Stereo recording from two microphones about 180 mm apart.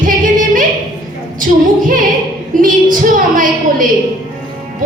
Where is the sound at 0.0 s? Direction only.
45° right (ahead or behind).